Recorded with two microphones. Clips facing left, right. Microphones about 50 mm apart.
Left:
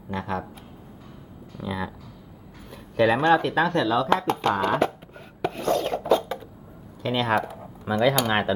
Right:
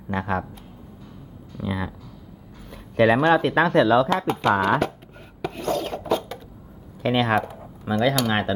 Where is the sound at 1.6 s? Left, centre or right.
Centre.